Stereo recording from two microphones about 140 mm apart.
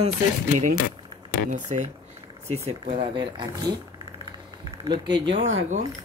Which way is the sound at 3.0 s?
35° right (ahead or behind).